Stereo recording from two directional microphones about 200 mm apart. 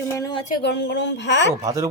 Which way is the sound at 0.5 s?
55° left (ahead or behind).